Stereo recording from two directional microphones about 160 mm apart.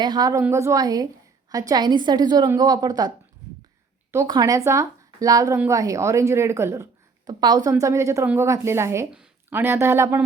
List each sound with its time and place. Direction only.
0.0 s a woman's voice: 25° right (ahead or behind)
4.1 s a woman's voice: 20° right (ahead or behind)